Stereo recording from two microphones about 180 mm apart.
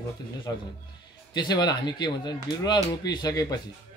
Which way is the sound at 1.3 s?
25° left (ahead or behind).